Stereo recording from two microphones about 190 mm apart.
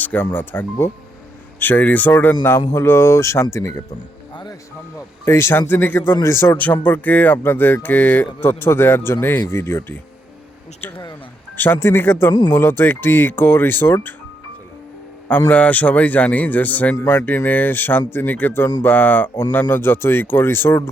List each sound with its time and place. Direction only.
0.0 s speech: 10° left (ahead or behind)
4.9 s speech: 15° left (ahead or behind)
11.5 s speech: 10° left (ahead or behind)
15.4 s speech: 10° left (ahead or behind)